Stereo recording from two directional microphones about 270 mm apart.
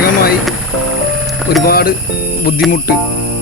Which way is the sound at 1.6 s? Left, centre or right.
Left.